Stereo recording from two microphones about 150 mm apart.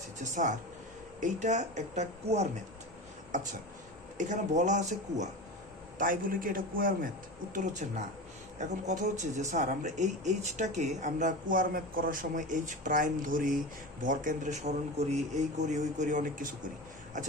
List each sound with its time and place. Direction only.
0.2 s speech: 55° right (ahead or behind)
4.2 s speech: 55° right (ahead or behind)
6.0 s a man's voice: 65° right (ahead or behind)
7.5 s speech: 55° right (ahead or behind)